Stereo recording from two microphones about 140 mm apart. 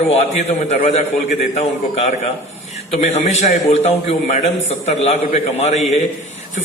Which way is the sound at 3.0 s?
55° left (ahead or behind).